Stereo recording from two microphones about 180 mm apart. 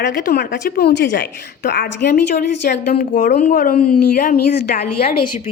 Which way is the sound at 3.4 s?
50° left (ahead or behind).